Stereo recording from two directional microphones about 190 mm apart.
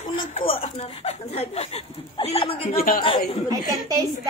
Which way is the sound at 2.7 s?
50° left (ahead or behind).